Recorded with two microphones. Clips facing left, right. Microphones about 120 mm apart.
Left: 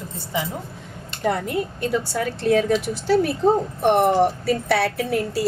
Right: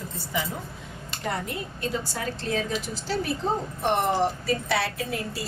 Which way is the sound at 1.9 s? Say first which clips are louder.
Left 4 dB; 60° left (ahead or behind).